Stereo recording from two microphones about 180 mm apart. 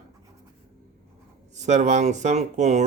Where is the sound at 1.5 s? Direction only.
40° right (ahead or behind).